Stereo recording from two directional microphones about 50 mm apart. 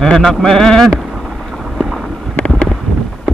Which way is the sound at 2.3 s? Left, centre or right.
Left.